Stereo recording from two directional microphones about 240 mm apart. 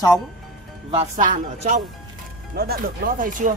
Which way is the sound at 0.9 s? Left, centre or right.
Right.